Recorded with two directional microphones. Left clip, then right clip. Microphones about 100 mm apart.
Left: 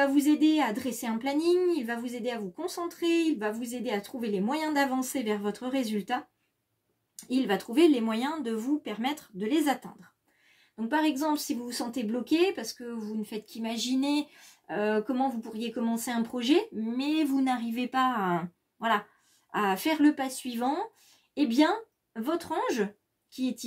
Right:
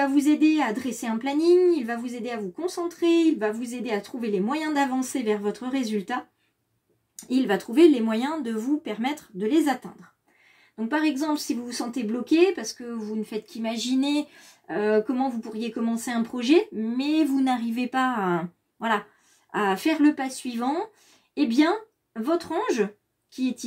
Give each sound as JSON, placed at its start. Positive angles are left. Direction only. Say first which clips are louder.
{"t": 0.0, "sound": "speech", "louder": "right 3 dB", "side_deg": 25}
{"t": 7.2, "sound": "speech", "louder": "right 4 dB", "side_deg": 10}
{"t": 10.9, "sound": "speech", "louder": "right 2 dB", "side_deg": 20}
{"t": 14.7, "sound": "speech", "louder": "right 5 dB", "side_deg": 25}
{"t": 17.0, "sound": "speech", "louder": "right 4 dB", "side_deg": 10}